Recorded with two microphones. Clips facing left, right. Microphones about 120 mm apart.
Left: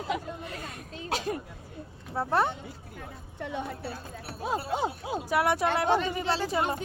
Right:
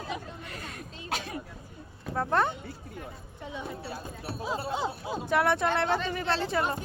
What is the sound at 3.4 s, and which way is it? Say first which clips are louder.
Speech: left 6 dB; 65° left (ahead or behind).